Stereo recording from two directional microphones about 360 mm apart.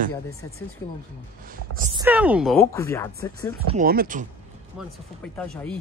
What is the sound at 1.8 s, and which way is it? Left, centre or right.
Speech, centre.